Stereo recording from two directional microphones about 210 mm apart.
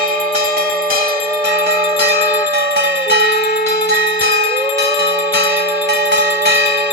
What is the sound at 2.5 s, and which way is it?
Music, 50° right (ahead or behind).